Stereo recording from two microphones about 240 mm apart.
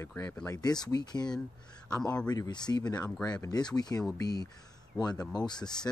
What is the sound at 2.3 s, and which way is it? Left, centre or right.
Speech, centre.